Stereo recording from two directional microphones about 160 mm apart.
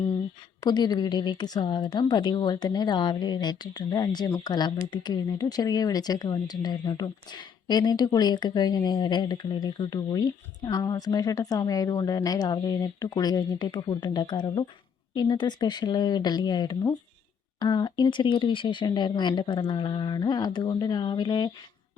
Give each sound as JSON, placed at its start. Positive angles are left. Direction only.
{"t": 0.6, "sound": "a woman's voice", "side_deg": 25}